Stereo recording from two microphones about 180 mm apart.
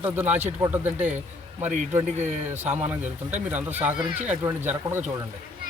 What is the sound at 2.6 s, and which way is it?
Speech, 10° right (ahead or behind).